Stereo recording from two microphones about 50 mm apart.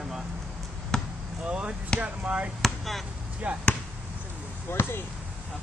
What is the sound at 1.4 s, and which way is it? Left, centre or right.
Chop, centre.